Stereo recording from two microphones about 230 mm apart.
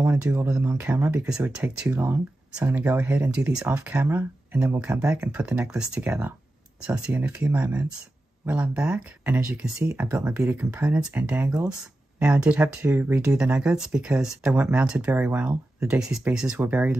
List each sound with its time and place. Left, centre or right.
0.0 s speech: centre